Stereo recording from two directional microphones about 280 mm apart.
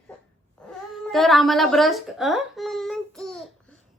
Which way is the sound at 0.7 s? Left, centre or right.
Centre.